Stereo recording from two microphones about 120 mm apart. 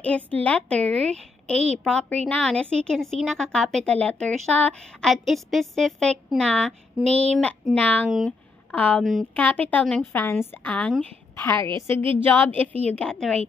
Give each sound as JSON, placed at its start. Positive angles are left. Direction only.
{"t": 0.0, "sound": "a woman's voice", "side_deg": 10}
{"t": 1.1, "sound": "speech", "side_deg": -65}
{"t": 1.9, "sound": "a woman's voice", "side_deg": 10}
{"t": 7.0, "sound": "speech", "side_deg": -65}
{"t": 7.7, "sound": "a woman's voice", "side_deg": 10}
{"t": 8.3, "sound": "a sound", "side_deg": 10}
{"t": 9.3, "sound": "a woman's voice", "side_deg": 10}
{"t": 11.9, "sound": "a woman's voice", "side_deg": -50}
{"t": 12.2, "sound": "a woman's voice", "side_deg": 15}